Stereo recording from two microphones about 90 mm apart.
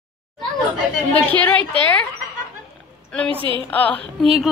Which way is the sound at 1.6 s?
65° right (ahead or behind).